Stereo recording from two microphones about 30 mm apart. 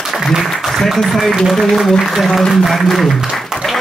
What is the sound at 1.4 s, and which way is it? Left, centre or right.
A man's voice, centre.